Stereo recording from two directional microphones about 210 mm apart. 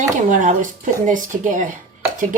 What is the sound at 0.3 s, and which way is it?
Speech, 35° right (ahead or behind).